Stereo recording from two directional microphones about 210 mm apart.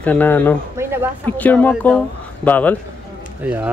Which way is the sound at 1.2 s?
10° left (ahead or behind).